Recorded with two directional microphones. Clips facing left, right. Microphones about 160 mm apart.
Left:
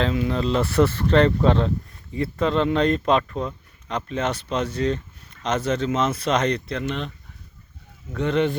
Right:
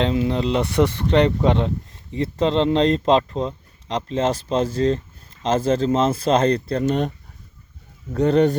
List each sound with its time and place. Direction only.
0.0 s speech: 25° right (ahead or behind); by 7.1 s 45° right (ahead or behind)
8.1 s speech: 40° right (ahead or behind)